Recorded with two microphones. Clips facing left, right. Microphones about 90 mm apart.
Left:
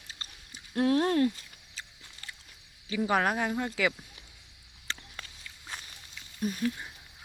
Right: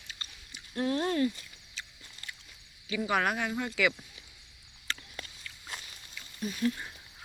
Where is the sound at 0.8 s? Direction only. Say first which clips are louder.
Left 4 dB; 65° left (ahead or behind).